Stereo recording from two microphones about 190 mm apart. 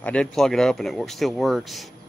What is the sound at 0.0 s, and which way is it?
Speech, 5° left (ahead or behind).